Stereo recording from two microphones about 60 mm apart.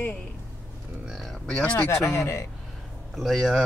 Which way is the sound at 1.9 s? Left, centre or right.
Left.